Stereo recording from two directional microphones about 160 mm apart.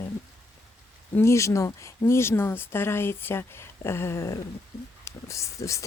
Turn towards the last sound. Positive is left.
turn(degrees=20)  # may be behind; listen again after turning